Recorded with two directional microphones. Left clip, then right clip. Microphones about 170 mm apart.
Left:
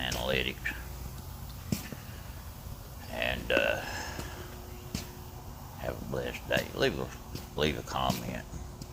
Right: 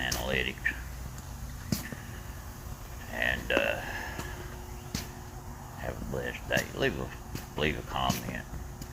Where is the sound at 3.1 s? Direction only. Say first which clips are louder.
Right 1 dB; 20° left (ahead or behind).